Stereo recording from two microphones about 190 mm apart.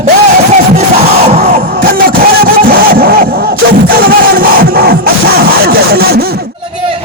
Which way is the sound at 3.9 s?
50° right (ahead or behind).